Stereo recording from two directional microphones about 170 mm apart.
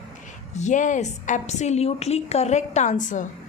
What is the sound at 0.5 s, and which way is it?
A woman's voice, 45° left (ahead or behind).